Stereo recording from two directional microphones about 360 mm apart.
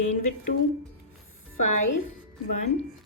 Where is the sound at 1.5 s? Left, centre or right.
Left.